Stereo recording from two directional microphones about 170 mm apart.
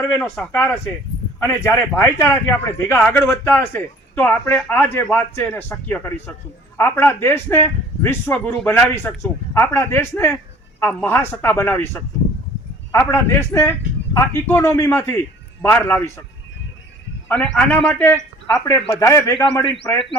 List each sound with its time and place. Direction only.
0.1 s speech: centre (ahead or behind)
0.5 s a man's voice: 10° left (ahead or behind)
17.2 s a man's voice: 5° left (ahead or behind)